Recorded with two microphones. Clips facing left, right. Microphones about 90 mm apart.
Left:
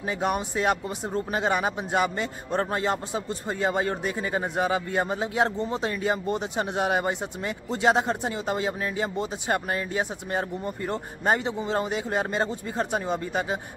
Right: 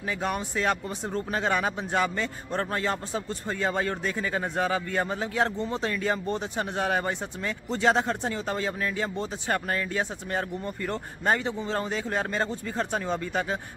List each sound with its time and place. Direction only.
0.0 s speech: 20° left (ahead or behind)